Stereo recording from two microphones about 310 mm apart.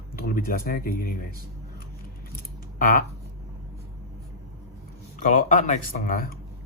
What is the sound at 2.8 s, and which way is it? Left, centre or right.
Speech, left.